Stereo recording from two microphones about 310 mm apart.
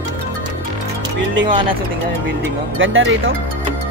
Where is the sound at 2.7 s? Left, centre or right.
Right.